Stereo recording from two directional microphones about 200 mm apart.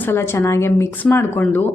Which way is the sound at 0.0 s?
10° left (ahead or behind).